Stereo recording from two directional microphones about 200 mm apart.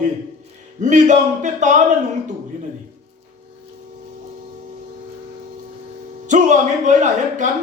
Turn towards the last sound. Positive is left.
turn(degrees=-40)  # may be behind; listen again after turning